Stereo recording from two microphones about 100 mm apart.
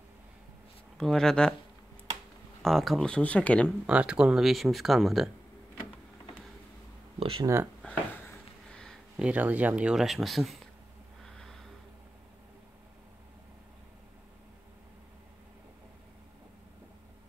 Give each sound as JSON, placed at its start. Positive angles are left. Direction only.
{"t": 0.9, "sound": "speech", "side_deg": 5}
{"t": 2.6, "sound": "speech", "side_deg": 0}
{"t": 3.2, "sound": "speech", "side_deg": 15}
{"t": 3.8, "sound": "speech", "side_deg": -10}
{"t": 7.2, "sound": "speech", "side_deg": -70}
{"t": 8.6, "sound": "a sound", "side_deg": 5}
{"t": 9.1, "sound": "speech", "side_deg": -10}
{"t": 11.2, "sound": "a sound", "side_deg": 5}